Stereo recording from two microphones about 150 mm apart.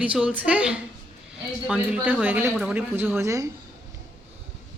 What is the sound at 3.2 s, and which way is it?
Speech, 20° right (ahead or behind).